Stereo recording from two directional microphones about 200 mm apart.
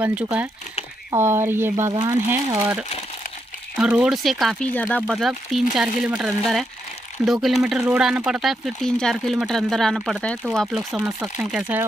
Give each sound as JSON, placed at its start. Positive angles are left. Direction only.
{"t": 0.0, "sound": "speech", "side_deg": -5}
{"t": 2.0, "sound": "speech", "side_deg": -25}
{"t": 3.7, "sound": "speech", "side_deg": -5}